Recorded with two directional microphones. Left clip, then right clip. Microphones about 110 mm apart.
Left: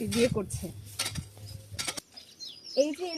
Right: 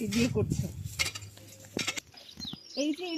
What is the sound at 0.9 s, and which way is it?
Stir, 45° right (ahead or behind).